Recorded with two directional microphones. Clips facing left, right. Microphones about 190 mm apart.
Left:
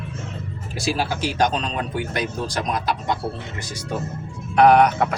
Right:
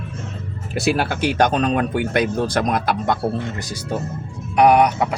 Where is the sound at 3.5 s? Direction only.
40° right (ahead or behind).